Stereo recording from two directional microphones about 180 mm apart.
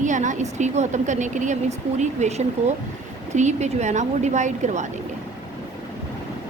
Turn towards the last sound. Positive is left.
turn(degrees=-40)  # may be behind; listen again after turning